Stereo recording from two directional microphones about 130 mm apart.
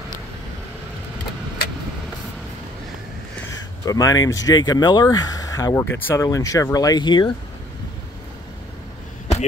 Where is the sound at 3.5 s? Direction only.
30° left (ahead or behind).